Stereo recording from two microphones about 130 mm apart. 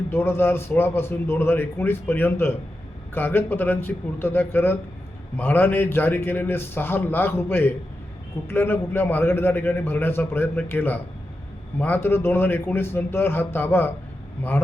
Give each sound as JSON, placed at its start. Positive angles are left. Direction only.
{"t": 0.1, "sound": "a man's voice", "side_deg": 20}